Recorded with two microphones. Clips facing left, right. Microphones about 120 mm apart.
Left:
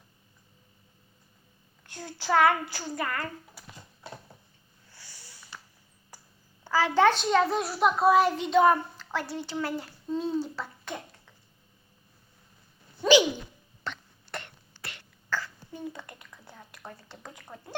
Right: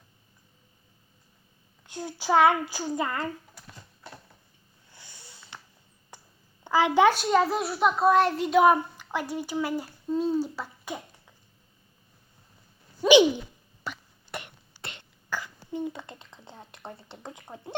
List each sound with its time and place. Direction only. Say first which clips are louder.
1.9 s a child's voice: right 2 dB; 15° right (ahead or behind)
3.5 s a sound: even; 5° left (ahead or behind)
4.9 s sniff: right 2 dB; 20° right (ahead or behind)
6.7 s a child's voice: right 2 dB; 20° right (ahead or behind)
13.0 s a sound: right 3 dB; 20° right (ahead or behind)
13.8 s hiccup: even; 10° right (ahead or behind)
14.8 s throat clearing: right 2 dB; 25° right (ahead or behind)